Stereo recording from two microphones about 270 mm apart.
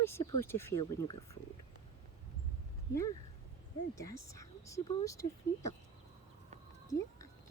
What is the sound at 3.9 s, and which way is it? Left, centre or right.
Speech, centre.